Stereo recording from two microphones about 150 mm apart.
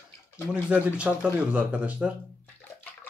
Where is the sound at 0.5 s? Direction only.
10° right (ahead or behind).